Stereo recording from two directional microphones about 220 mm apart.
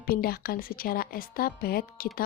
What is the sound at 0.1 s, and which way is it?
A woman's voice, 40° left (ahead or behind).